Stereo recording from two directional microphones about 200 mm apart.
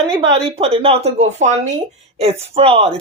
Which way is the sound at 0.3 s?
30° right (ahead or behind).